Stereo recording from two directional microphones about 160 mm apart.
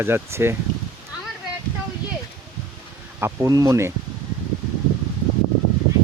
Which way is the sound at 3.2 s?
15° right (ahead or behind).